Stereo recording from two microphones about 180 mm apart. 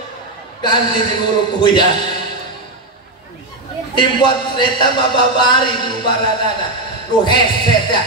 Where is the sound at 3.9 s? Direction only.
25° left (ahead or behind).